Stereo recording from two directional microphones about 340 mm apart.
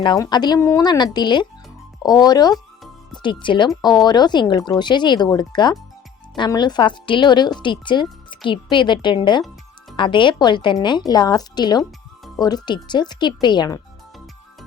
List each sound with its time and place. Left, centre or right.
0.0 s speech: centre